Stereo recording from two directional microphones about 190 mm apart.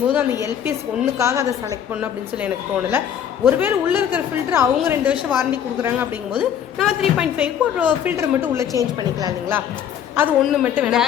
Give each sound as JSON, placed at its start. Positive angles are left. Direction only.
{"t": 0.1, "sound": "a woman's voice", "side_deg": -10}
{"t": 10.4, "sound": "a woman's voice", "side_deg": -5}